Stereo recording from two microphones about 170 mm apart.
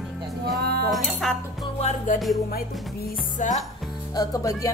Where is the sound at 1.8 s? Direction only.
45° left (ahead or behind).